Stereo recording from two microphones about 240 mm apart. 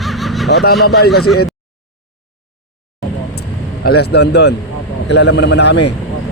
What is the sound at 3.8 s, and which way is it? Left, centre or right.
A man's voice, left.